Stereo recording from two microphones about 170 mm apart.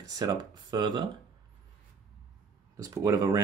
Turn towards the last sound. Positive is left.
turn(degrees=-20)  # may be behind; listen again after turning